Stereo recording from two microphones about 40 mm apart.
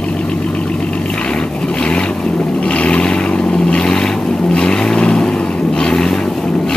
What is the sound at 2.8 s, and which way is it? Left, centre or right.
Vehicle, left.